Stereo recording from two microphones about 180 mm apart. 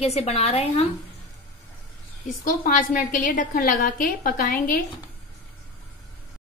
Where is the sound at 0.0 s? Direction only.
35° left (ahead or behind).